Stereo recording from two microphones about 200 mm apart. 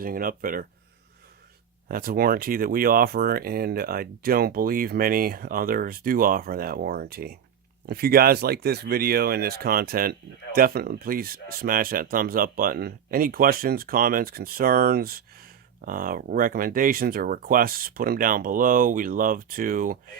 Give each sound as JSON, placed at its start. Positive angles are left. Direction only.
{"t": 0.0, "sound": "speech", "side_deg": -45}
{"t": 1.9, "sound": "speech", "side_deg": -45}